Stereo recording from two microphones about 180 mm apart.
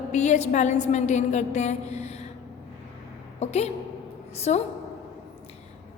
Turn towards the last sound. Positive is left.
turn(degrees=35)  # may be behind; listen again after turning